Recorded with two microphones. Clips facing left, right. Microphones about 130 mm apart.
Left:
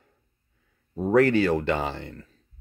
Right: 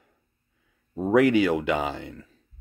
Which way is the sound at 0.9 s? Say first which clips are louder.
Even; 10° right (ahead or behind).